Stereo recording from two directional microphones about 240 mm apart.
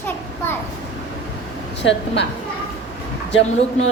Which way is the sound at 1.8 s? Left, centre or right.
Left.